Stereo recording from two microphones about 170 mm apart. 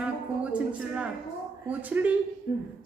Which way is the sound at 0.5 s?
5° right (ahead or behind).